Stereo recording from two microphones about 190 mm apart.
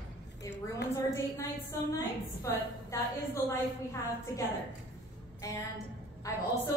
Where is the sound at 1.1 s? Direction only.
15° left (ahead or behind).